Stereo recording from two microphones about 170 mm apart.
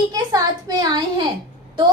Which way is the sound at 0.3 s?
25° right (ahead or behind).